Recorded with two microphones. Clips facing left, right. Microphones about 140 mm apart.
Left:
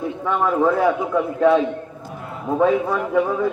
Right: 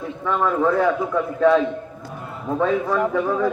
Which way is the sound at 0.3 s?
10° left (ahead or behind).